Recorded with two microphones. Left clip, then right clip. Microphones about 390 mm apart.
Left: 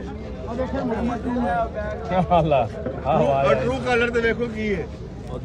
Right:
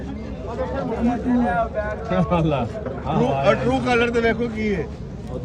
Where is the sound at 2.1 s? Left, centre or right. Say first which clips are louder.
Left 4 dB; centre.